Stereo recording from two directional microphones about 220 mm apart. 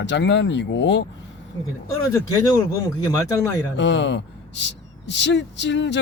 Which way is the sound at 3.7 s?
55° left (ahead or behind).